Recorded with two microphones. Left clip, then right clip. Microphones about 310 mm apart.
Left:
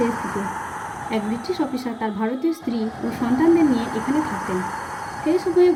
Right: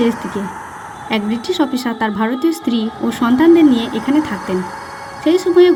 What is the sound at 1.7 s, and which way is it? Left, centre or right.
Speech, right.